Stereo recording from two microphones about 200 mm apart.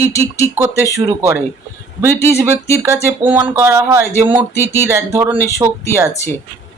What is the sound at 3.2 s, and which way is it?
Speech, 10° right (ahead or behind).